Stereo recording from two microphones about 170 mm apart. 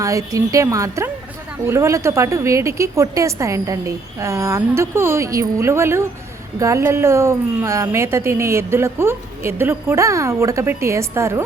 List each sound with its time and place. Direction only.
0.0 s a woman's voice: 20° right (ahead or behind)